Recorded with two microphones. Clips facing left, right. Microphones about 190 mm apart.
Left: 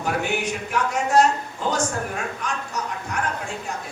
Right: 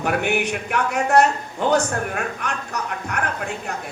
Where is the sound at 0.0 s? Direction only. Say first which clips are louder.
Right 3 dB; 65° right (ahead or behind).